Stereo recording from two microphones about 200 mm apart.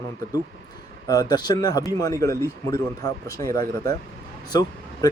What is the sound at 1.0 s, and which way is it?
Speech, 20° left (ahead or behind).